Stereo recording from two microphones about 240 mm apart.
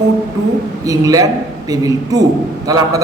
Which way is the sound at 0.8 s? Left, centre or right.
Centre.